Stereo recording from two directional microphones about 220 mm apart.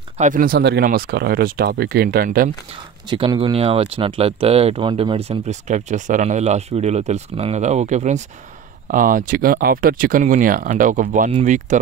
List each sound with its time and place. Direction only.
0.2 s speech: 40° right (ahead or behind)
3.1 s speech: 20° right (ahead or behind)